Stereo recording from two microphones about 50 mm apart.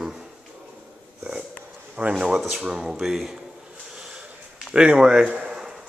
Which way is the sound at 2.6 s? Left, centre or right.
Centre.